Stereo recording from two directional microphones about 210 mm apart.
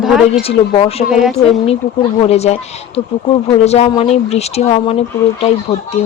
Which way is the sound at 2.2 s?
30° left (ahead or behind).